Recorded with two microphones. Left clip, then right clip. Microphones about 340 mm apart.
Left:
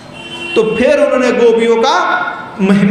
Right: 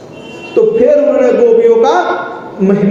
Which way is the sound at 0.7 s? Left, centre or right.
Left.